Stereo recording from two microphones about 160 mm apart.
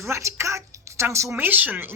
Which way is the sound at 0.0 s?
15° right (ahead or behind).